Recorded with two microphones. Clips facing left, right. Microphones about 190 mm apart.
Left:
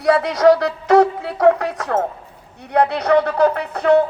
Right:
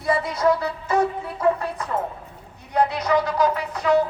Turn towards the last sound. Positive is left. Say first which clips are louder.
# left 5 dB
turn(degrees=60)  # may be behind; listen again after turning